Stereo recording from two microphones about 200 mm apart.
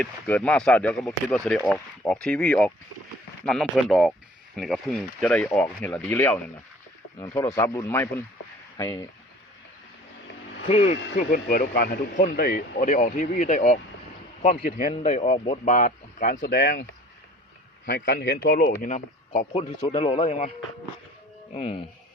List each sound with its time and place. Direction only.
0.0 s speech: 5° left (ahead or behind)
10.7 s speech: 30° left (ahead or behind)
11.2 s speech: 45° left (ahead or behind)
17.8 s speech: 55° left (ahead or behind); by 20.5 s 35° left (ahead or behind)
21.5 s speech: 30° left (ahead or behind)